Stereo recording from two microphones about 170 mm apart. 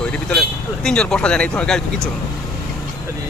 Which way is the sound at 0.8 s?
5° left (ahead or behind).